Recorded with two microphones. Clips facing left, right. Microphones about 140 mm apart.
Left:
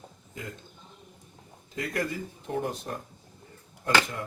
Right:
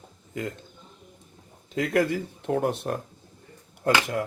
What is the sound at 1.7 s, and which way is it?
Speech, 65° right (ahead or behind).